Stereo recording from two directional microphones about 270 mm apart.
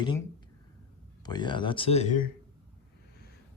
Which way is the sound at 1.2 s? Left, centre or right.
Centre.